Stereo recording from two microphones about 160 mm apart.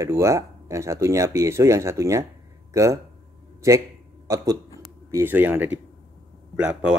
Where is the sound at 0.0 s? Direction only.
20° right (ahead or behind).